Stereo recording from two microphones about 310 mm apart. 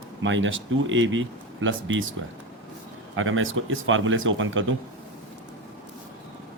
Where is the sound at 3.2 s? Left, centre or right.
Right.